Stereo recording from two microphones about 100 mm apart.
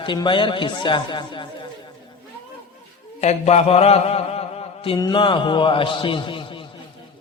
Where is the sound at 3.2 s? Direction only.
90° left.